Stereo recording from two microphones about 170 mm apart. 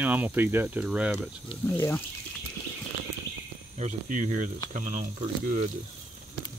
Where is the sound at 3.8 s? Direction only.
45° right (ahead or behind).